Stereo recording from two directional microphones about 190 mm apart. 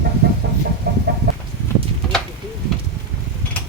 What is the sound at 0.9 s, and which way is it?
Chicken, 55° right (ahead or behind).